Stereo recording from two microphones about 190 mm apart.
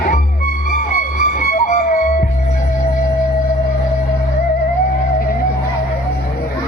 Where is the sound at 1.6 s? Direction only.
45° left (ahead or behind).